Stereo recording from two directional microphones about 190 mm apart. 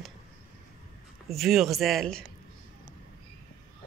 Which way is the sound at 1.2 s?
Centre (ahead or behind).